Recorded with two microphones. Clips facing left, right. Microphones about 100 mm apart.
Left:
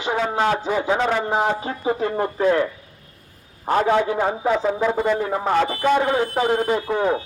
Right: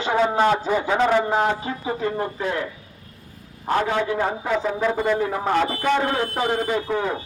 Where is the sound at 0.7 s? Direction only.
5° left (ahead or behind).